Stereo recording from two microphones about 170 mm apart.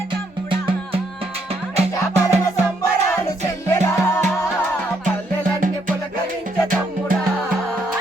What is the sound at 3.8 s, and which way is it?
Music, 15° left (ahead or behind).